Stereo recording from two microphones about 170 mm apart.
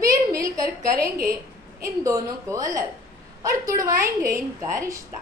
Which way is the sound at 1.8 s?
20° right (ahead or behind).